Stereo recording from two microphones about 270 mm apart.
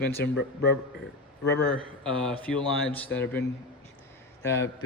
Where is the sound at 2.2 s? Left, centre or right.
Centre.